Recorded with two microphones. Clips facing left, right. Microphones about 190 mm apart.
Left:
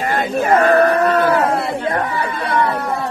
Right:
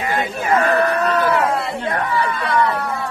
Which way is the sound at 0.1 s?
45° left (ahead or behind).